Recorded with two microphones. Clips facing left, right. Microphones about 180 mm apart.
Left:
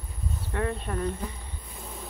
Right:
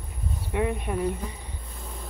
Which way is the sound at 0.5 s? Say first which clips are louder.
Right 3 dB; 15° right (ahead or behind).